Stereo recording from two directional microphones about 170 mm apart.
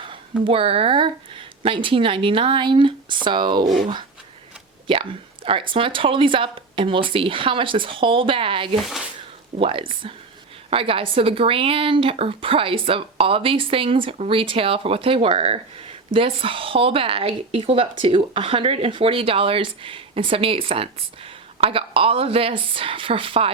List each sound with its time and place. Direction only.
0.4 s speech: 35° right (ahead or behind)
4.9 s speech: 30° right (ahead or behind)
8.7 s speech: centre (ahead or behind)
9.6 s speech: 30° right (ahead or behind)